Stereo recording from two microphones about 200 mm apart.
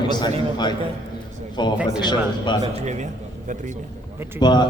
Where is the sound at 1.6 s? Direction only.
20° left (ahead or behind).